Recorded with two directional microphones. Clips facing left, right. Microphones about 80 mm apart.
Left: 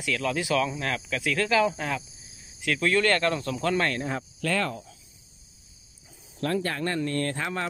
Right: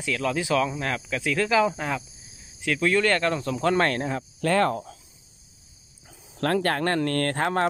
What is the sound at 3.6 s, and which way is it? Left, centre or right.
Speech, right.